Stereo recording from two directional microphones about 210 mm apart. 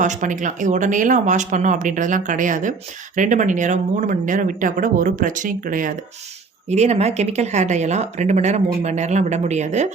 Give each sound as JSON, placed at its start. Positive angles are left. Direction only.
{"t": 0.0, "sound": "speech", "side_deg": -35}